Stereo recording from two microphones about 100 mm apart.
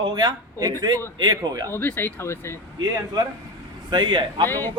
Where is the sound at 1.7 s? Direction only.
20° left (ahead or behind).